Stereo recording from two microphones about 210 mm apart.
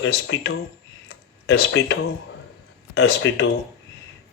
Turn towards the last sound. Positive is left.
turn(degrees=65)  # may be behind; listen again after turning